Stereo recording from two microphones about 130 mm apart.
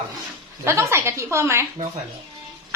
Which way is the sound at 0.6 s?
20° right (ahead or behind).